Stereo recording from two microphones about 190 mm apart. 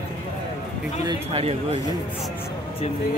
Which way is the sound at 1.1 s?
30° right (ahead or behind).